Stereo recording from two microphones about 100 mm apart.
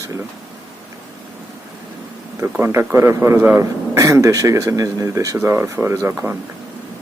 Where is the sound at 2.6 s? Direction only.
25° right (ahead or behind).